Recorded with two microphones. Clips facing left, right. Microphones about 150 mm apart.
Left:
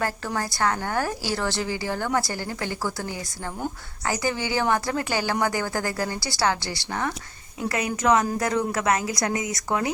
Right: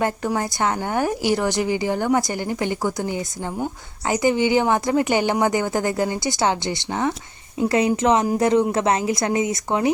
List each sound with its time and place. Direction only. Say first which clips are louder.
0.0 s a woman's voice: right 5 dB; 20° right (ahead or behind)